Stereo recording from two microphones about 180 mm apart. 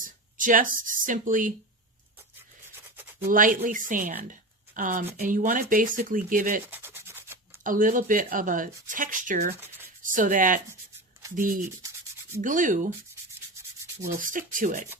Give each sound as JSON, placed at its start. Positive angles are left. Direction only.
{"t": 0.0, "sound": "a sound", "side_deg": -50}
{"t": 0.8, "sound": "speech", "side_deg": -50}
{"t": 3.2, "sound": "speech", "side_deg": -50}
{"t": 6.7, "sound": "rub", "side_deg": -10}
{"t": 7.6, "sound": "speech", "side_deg": -50}
{"t": 11.2, "sound": "rub", "side_deg": -20}
{"t": 12.4, "sound": "speech", "side_deg": -45}
{"t": 14.2, "sound": "speech", "side_deg": -50}